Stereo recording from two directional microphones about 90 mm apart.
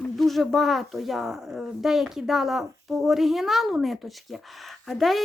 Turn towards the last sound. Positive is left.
turn(degrees=0)  # may be behind; listen again after turning